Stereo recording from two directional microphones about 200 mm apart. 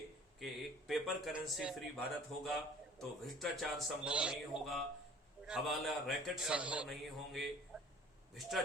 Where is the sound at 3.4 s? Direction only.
Centre (ahead or behind).